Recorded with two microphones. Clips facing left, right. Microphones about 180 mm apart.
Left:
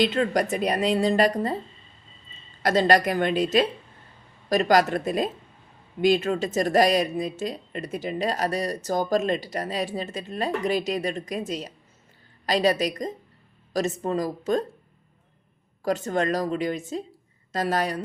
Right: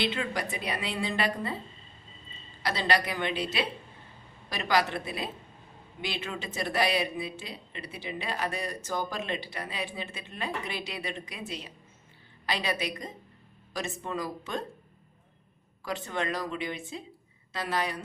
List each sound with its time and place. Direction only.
0.0 s speech: 45° left (ahead or behind)
2.6 s a woman's voice: 45° left (ahead or behind)
15.8 s a woman's voice: 45° left (ahead or behind)